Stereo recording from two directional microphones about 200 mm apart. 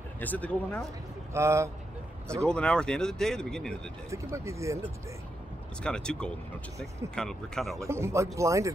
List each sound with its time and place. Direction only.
0.2 s speech: 10° left (ahead or behind)
1.3 s speech: 15° right (ahead or behind)
2.4 s speech: 5° left (ahead or behind)
4.1 s speech: 15° right (ahead or behind)
5.8 s speech: 5° left (ahead or behind)
7.8 s speech: 15° right (ahead or behind)